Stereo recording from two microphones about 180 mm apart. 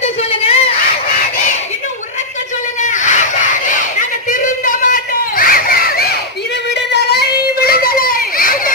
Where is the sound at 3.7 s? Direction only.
45° left (ahead or behind).